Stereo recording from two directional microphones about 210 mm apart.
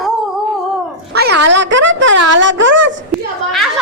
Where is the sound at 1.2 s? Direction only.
55° right (ahead or behind).